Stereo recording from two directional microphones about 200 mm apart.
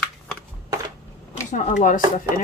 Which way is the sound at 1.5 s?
40° left (ahead or behind).